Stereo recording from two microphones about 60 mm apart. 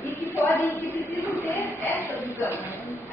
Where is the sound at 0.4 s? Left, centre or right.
Left.